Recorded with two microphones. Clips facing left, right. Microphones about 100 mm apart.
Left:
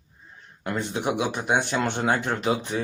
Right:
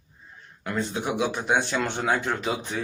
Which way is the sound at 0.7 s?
55° left (ahead or behind).